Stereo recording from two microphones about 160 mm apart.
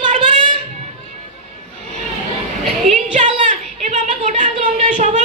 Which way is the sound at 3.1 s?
50° right (ahead or behind).